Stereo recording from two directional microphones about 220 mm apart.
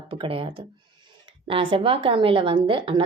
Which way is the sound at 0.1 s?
25° right (ahead or behind).